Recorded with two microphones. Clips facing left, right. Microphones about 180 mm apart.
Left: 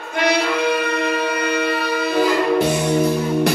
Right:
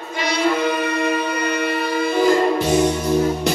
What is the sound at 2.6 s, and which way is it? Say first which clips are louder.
Music: left 1 dB; 60° left (ahead or behind).